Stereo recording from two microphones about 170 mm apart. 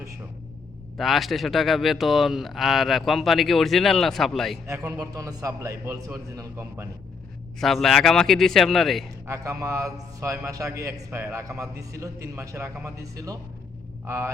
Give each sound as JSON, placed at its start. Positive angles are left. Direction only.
{"t": 0.9, "sound": "a man's voice", "side_deg": 0}
{"t": 4.6, "sound": "a man's voice", "side_deg": -20}
{"t": 7.6, "sound": "a man's voice", "side_deg": 0}
{"t": 9.2, "sound": "a man's voice", "side_deg": -20}